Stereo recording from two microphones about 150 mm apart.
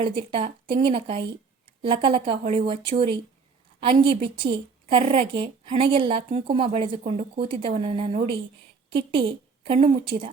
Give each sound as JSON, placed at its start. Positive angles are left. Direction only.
{"t": 0.0, "sound": "a woman's voice", "side_deg": -35}